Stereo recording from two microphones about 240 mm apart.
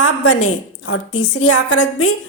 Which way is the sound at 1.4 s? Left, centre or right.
Left.